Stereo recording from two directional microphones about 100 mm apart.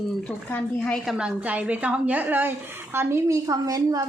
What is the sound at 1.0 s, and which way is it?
A woman's voice, 10° right (ahead or behind).